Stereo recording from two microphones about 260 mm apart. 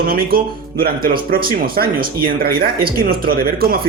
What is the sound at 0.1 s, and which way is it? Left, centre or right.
Speech, right.